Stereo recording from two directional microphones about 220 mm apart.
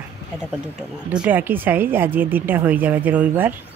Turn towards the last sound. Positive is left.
turn(degrees=-10)  # may be behind; listen again after turning